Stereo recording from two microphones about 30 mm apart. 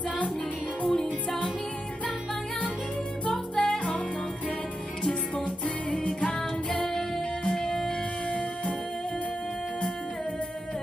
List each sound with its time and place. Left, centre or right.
0.9 s music: centre
3.6 s music: left
5.6 s music: left
7.4 s music: left
8.3 s music: left